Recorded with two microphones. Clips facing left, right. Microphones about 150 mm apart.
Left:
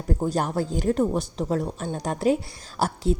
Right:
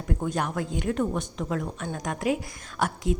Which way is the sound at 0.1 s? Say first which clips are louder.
Left 4 dB; 35° left (ahead or behind).